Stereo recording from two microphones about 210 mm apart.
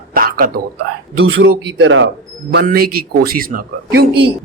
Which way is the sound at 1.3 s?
65° right (ahead or behind).